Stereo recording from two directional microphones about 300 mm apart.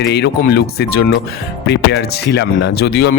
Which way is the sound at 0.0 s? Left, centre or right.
Left.